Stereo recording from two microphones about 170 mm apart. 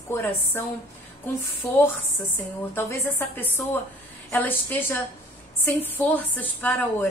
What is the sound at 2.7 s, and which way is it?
A woman's voice, 10° left (ahead or behind).